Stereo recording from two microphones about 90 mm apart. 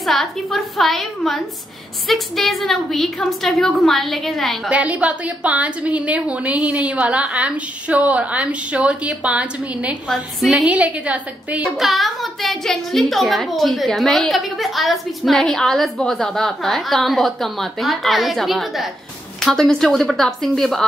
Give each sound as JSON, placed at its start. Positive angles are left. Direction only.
{"t": 0.0, "sound": "a woman's voice", "side_deg": 0}
{"t": 4.6, "sound": "a woman's voice", "side_deg": -15}
{"t": 10.0, "sound": "a woman's voice", "side_deg": 0}
{"t": 10.6, "sound": "a woman's voice", "side_deg": -15}
{"t": 11.7, "sound": "a woman's voice", "side_deg": 0}